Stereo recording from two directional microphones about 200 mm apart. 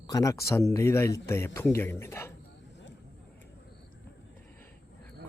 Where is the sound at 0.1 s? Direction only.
15° left (ahead or behind).